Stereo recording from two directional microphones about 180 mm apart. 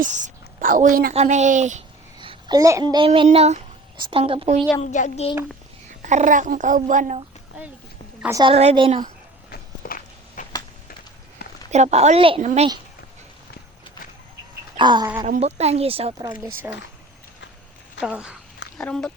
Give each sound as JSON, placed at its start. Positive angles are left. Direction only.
{"t": 0.0, "sound": "a woman's voice", "side_deg": -45}
{"t": 1.1, "sound": "speech", "side_deg": -40}
{"t": 2.1, "sound": "a sound", "side_deg": -25}
{"t": 2.6, "sound": "a child's voice", "side_deg": -20}
{"t": 3.1, "sound": "speech", "side_deg": -35}
{"t": 4.8, "sound": "a child's voice", "side_deg": 40}
{"t": 6.0, "sound": "a child's voice", "side_deg": -45}
{"t": 8.3, "sound": "a child's voice", "side_deg": -25}
{"t": 9.5, "sound": "walk", "side_deg": 55}
{"t": 11.7, "sound": "speech", "side_deg": -40}
{"t": 14.8, "sound": "a child's voice", "side_deg": -25}
{"t": 15.4, "sound": "speech", "side_deg": -35}
{"t": 16.2, "sound": "speech", "side_deg": -15}
{"t": 18.0, "sound": "speech", "side_deg": -5}